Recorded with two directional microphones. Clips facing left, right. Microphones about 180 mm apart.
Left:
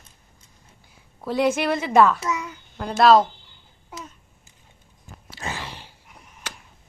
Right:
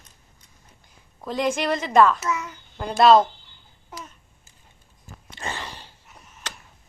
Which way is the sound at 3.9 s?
10° left (ahead or behind).